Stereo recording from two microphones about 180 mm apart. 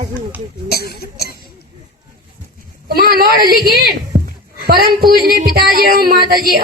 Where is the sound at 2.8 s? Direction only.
55° right (ahead or behind).